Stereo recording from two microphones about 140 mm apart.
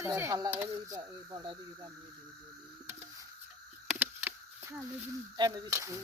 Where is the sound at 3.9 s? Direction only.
15° right (ahead or behind).